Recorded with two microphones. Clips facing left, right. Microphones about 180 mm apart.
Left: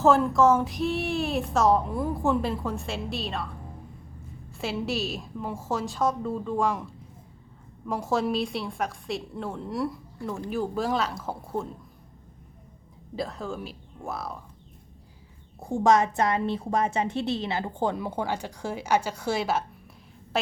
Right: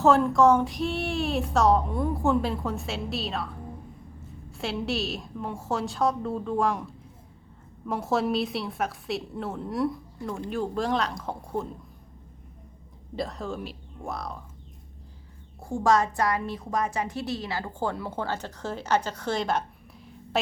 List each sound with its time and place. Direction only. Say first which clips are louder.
0.0 s a woman's voice: right 1 dB; centre (ahead or behind)
4.5 s a woman's voice: even; centre (ahead or behind)
7.9 s a woman's voice: even; centre (ahead or behind)
13.1 s a woman's voice: even; centre (ahead or behind)
15.6 s a woman's voice: left 2 dB; 20° left (ahead or behind); by 20.5 s centre (ahead or behind)